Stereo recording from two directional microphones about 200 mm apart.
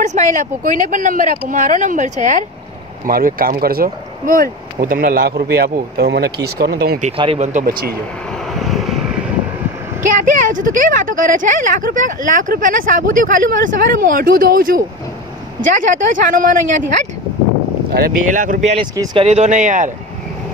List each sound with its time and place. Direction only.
0.0 s speech: 35° right (ahead or behind)
7.1 s speech: 30° right (ahead or behind)
8.5 s vehicle: centre (ahead or behind)
10.1 s speech: 40° right (ahead or behind)
17.9 s speech: 45° right (ahead or behind)